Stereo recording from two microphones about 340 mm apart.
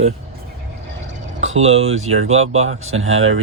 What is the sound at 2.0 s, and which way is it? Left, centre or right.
Speech, right.